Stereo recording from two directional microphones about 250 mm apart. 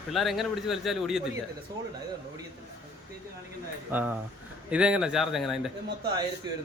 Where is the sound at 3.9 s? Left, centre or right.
Centre.